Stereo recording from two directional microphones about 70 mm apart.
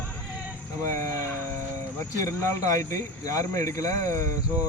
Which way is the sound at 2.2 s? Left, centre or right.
Left.